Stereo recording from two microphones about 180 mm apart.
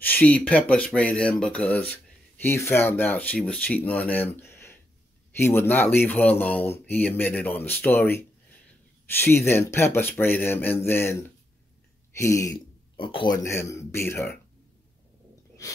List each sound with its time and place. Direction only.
0.0 s speech: 10° left (ahead or behind)
12.9 s speech: 30° left (ahead or behind)